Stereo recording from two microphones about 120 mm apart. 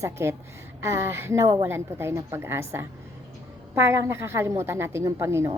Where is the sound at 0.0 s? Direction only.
20° right (ahead or behind).